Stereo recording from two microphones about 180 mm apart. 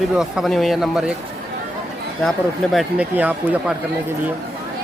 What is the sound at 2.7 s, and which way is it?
Speech, 10° right (ahead or behind).